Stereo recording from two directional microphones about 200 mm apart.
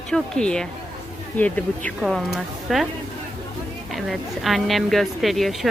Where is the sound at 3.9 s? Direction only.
Centre (ahead or behind).